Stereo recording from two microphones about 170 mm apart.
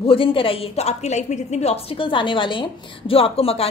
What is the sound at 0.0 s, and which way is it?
A woman's voice, 30° left (ahead or behind).